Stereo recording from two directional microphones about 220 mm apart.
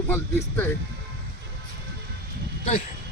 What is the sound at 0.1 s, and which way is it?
Speech, 10° left (ahead or behind).